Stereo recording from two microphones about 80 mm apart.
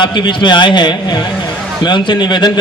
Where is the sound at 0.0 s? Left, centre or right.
Left.